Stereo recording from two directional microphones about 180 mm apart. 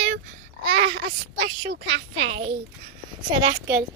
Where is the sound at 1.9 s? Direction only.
90° right.